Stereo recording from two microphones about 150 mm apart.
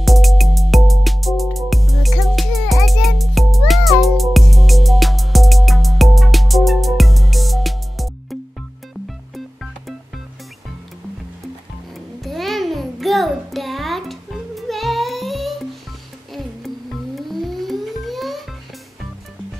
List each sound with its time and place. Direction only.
0.0 s music: centre (ahead or behind)
12.2 s babbling: centre (ahead or behind)
16.3 s music: centre (ahead or behind)